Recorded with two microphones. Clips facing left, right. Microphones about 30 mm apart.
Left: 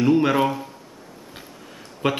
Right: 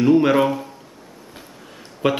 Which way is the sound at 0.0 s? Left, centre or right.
Centre.